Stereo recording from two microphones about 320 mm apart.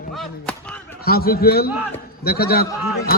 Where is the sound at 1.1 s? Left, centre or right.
Left.